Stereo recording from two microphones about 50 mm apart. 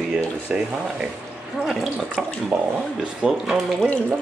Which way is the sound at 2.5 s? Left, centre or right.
Right.